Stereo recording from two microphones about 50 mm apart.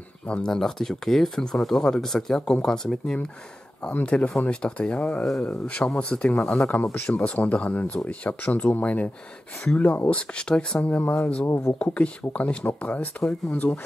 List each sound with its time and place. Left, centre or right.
0.3 s speech: centre
3.9 s speech: left
6.7 s speech: left
10.8 s speech: left
11.4 s speech: left
11.8 s speech: left